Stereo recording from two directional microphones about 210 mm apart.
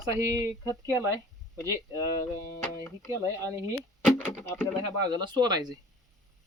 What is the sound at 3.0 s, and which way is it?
Speech, 15° right (ahead or behind).